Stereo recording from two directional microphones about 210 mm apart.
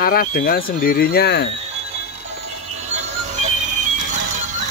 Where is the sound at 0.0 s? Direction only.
45° left (ahead or behind).